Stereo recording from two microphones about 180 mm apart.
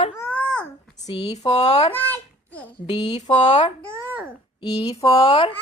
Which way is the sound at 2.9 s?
40° left (ahead or behind).